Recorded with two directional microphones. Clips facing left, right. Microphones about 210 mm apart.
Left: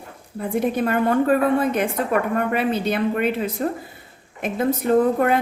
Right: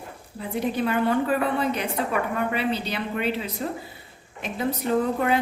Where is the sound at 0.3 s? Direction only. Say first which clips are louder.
Left 5 dB; 50° left (ahead or behind).